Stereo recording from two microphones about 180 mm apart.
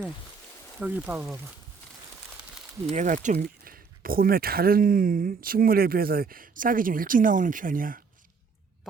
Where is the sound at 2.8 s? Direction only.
45° right (ahead or behind).